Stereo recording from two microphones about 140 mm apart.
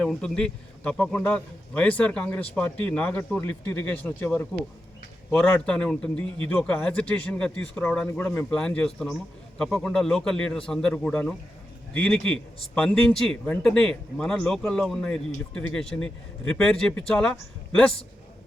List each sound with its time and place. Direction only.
0.0 s a man's voice: 5° left (ahead or behind)